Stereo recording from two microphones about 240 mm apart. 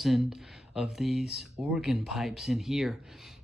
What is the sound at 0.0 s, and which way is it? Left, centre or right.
Speech, centre.